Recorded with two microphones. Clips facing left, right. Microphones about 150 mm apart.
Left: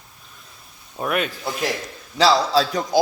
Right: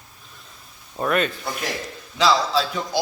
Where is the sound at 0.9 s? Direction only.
5° left (ahead or behind).